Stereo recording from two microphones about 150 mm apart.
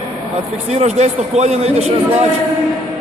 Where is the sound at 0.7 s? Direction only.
50° right (ahead or behind).